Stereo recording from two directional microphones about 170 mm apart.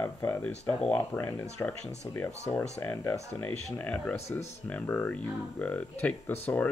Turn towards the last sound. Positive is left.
turn(degrees=10)  # may be behind; listen again after turning